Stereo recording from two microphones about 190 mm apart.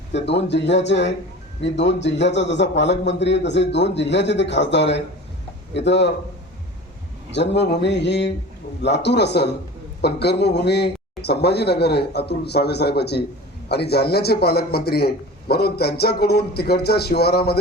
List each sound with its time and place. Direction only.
0.1 s a man's voice: 65° left (ahead or behind)
7.3 s a man's voice: 65° left (ahead or behind)